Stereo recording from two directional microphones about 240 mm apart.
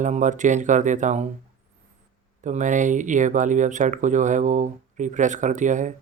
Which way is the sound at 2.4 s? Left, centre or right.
Right.